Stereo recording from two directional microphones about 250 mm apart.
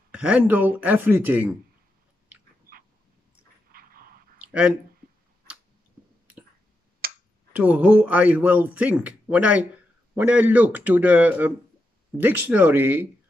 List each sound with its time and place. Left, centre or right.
0.1 s speech: centre
4.4 s a sound: centre
7.0 s finger snapping: right
7.5 s speech: centre